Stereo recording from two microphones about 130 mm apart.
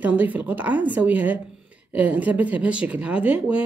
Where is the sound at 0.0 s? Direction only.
10° right (ahead or behind).